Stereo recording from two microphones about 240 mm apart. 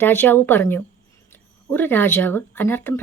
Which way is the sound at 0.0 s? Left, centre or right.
Centre.